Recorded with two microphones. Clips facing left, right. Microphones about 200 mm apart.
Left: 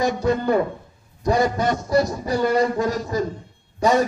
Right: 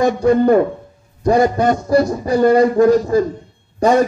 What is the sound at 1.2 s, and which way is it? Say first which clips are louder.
A man's voice: right 6 dB; 55° right (ahead or behind).